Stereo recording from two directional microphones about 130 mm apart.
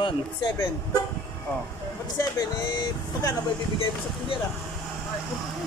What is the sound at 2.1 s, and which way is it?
Speech, 30° left (ahead or behind).